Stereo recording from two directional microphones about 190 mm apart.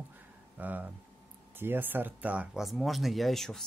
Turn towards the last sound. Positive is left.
turn(degrees=0)  # may be behind; listen again after turning